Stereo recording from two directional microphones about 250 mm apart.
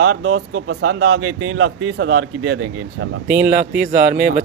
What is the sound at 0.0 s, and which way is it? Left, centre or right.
Speech, right.